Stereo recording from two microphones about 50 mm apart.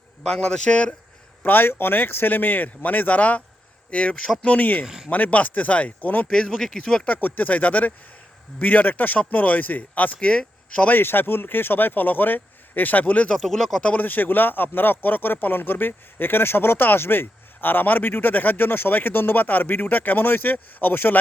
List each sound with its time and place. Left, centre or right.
0.3 s a man's voice: centre
1.5 s speech: left
6.6 s a man's voice: centre
7.0 s speech: left
10.8 s speech: left
13.3 s speech: centre
13.8 s speech: left